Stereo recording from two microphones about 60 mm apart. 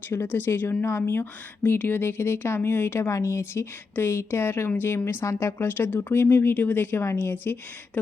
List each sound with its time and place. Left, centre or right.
0.1 s speech: left
3.1 s speech: left
5.2 s speech: left
5.6 s speech: left